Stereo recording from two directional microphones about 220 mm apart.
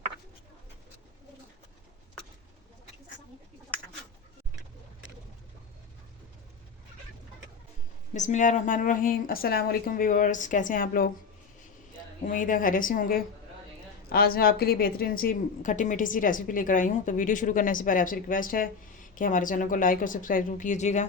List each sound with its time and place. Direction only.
8.1 s a woman's voice: 35° left (ahead or behind)
12.2 s a woman's voice: 35° left (ahead or behind)